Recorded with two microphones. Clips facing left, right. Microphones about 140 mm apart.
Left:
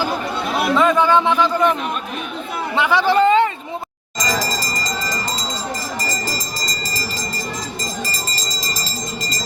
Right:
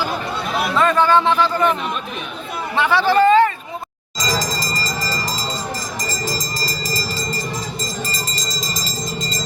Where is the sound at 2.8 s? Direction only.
15° left (ahead or behind).